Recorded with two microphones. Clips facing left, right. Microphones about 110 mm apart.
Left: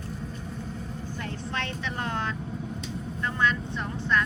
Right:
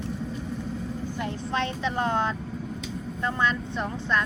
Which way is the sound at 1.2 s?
20° right (ahead or behind).